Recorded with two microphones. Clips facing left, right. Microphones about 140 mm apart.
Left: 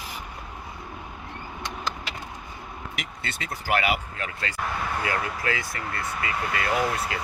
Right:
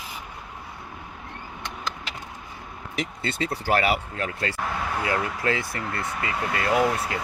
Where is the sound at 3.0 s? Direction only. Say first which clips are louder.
Right 11 dB; 30° right (ahead or behind).